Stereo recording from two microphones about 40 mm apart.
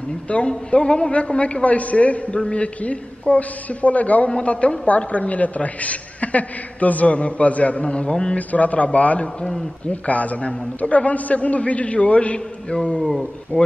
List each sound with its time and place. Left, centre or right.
0.3 s a man's voice: left
8.4 s a man's voice: left
9.4 s a man's voice: centre
9.8 s a man's voice: left
13.0 s a man's voice: centre